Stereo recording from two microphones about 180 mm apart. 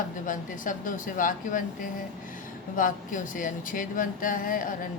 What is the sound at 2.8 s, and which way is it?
A man's voice, 50° left (ahead or behind).